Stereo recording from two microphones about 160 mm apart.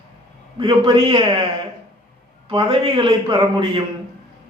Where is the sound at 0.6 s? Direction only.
35° right (ahead or behind).